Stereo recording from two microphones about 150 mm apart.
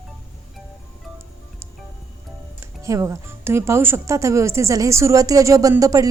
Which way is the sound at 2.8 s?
20° right (ahead or behind).